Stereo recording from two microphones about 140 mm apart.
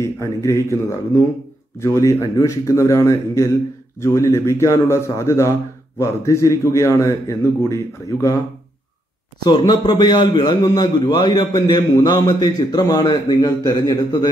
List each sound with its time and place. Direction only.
0.0 s a man's voice: 20° left (ahead or behind)
9.4 s a man's voice: 30° left (ahead or behind)